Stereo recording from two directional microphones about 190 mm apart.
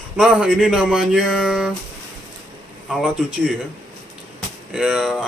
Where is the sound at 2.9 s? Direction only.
5° right (ahead or behind).